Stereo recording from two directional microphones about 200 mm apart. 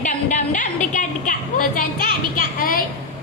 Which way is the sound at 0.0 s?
40° left (ahead or behind).